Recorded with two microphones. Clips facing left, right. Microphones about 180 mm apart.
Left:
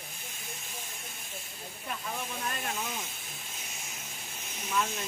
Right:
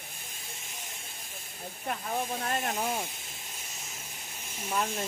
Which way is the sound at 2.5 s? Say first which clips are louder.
Right 5 dB; 50° right (ahead or behind).